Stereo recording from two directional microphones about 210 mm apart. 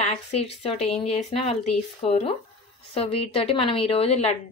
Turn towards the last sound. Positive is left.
turn(degrees=30)  # may be behind; listen again after turning